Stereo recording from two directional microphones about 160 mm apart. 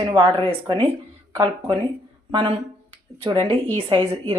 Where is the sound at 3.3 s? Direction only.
35° right (ahead or behind).